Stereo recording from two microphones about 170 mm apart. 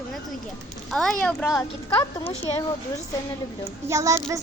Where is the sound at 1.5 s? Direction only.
20° left (ahead or behind).